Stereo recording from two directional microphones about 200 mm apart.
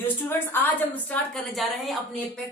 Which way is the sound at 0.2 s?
10° left (ahead or behind).